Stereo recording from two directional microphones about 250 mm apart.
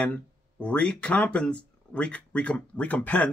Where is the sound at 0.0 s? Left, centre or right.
Centre.